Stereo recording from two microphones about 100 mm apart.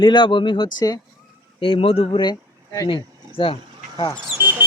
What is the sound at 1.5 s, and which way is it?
Speech, 65° left (ahead or behind).